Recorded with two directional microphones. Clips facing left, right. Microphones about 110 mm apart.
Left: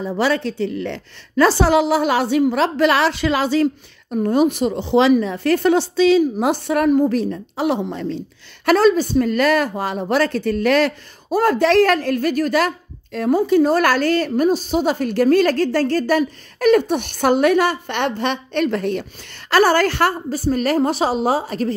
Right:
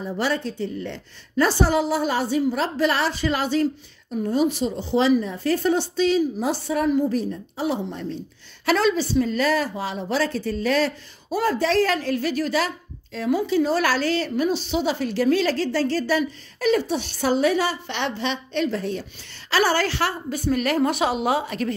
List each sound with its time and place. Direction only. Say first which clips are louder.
0.0 s a woman's voice: left 5 dB; 90° left; by 7.1 s 60° left (ahead or behind)
7.1 s a woman's voice: left 4 dB; 80° left
8.6 s a woman's voice: left 6 dB; 45° left (ahead or behind); by 19.0 s 65° left (ahead or behind)
19.5 s a woman's voice: left 6 dB; 50° left (ahead or behind); by 21.7 s 35° left (ahead or behind)